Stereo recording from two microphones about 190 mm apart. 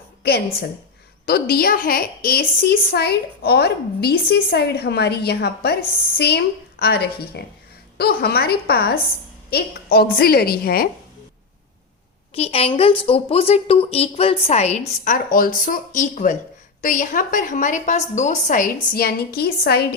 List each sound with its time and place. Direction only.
0.2 s a woman's voice: 60° left (ahead or behind)
12.3 s a woman's voice: 30° left (ahead or behind); by 19.9 s 55° left (ahead or behind)